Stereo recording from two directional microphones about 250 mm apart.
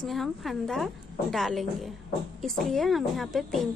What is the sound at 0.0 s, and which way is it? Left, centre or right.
Speech, centre.